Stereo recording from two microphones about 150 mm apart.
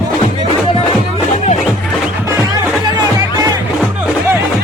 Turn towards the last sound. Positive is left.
turn(degrees=-25)  # may be behind; listen again after turning